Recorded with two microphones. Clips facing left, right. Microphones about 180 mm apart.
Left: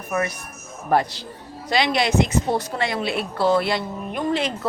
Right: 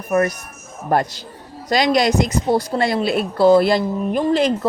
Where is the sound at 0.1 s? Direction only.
45° right (ahead or behind).